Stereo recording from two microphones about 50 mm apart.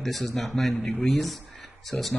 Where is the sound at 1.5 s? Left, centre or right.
Centre.